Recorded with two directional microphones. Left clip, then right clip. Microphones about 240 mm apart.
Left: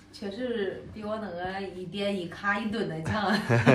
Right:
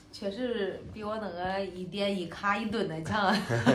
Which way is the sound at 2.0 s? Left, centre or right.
Centre.